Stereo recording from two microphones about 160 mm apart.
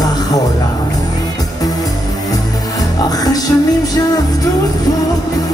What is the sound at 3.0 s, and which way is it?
Music, 25° left (ahead or behind).